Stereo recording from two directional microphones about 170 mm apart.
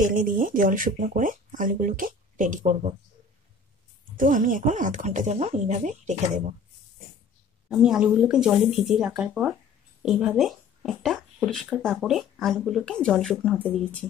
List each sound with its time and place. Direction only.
0.0 s speech: 50° right (ahead or behind)
4.2 s speech: 50° right (ahead or behind)
7.7 s speech: 5° right (ahead or behind)